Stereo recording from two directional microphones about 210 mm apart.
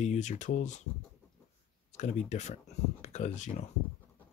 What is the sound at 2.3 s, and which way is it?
Speech, 35° left (ahead or behind).